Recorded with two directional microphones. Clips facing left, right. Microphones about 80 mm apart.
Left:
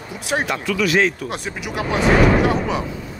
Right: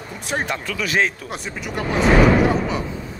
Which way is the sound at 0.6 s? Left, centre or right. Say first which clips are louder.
Left 5 dB; right.